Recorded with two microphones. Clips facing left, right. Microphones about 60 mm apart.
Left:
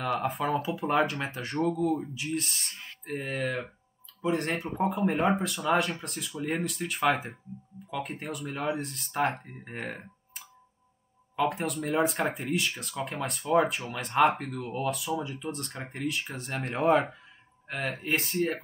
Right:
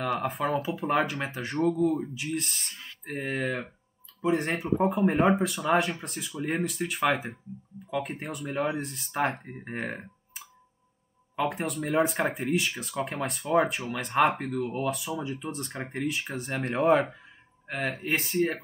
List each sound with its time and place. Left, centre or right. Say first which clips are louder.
0.2 s speech: even; centre
9.4 s speech: right 4 dB; centre
11.4 s speech: left 1 dB; centre